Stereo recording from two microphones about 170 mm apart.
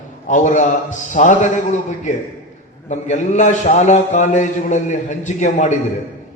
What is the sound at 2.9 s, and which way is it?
A man's voice, 45° left (ahead or behind).